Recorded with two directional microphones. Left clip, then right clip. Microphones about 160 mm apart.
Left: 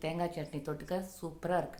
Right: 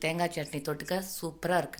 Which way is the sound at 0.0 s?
15° right (ahead or behind).